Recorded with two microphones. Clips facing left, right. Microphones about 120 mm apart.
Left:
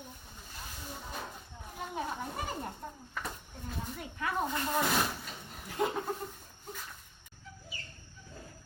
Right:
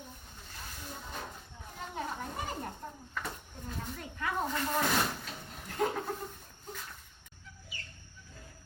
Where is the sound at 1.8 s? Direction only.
10° left (ahead or behind).